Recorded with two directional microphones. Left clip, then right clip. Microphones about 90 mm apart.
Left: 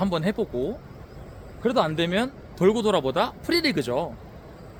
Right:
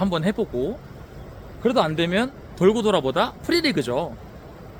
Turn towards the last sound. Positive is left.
turn(degrees=15)  # may be behind; listen again after turning